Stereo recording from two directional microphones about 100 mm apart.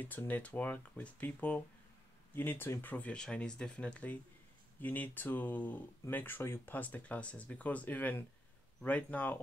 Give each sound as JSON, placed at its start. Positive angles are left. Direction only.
{"t": 0.0, "sound": "speech", "side_deg": 15}